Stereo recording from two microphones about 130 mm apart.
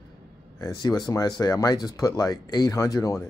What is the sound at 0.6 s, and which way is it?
Speech, 25° left (ahead or behind).